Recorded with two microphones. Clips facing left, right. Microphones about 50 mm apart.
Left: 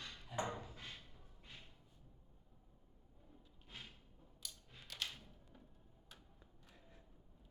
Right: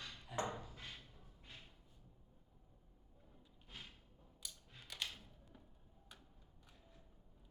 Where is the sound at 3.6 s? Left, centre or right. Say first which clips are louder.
Even; centre.